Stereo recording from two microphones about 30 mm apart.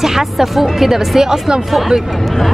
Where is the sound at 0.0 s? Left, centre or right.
Centre.